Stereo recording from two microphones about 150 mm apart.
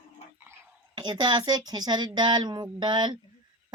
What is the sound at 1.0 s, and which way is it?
Speech, 30° right (ahead or behind).